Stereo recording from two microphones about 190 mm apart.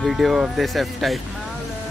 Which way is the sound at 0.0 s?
Centre (ahead or behind).